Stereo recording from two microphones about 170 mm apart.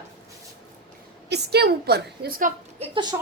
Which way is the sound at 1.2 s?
75° right (ahead or behind).